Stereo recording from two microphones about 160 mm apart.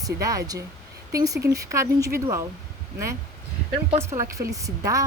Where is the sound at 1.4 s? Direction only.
80° right.